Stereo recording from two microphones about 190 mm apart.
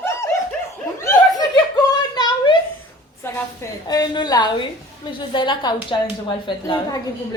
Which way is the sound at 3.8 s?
20° left (ahead or behind).